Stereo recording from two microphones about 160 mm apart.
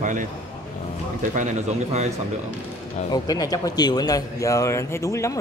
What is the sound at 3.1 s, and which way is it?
Speech, 25° left (ahead or behind).